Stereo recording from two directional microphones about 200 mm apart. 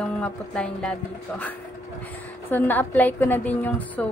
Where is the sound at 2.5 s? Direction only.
10° left (ahead or behind).